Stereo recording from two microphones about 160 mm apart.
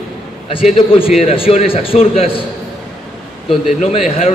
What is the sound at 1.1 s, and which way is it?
A man's voice, 35° left (ahead or behind).